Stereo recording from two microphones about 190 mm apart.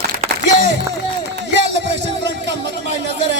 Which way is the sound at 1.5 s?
65° right (ahead or behind).